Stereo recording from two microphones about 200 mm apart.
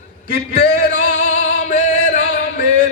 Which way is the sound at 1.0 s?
40° left (ahead or behind).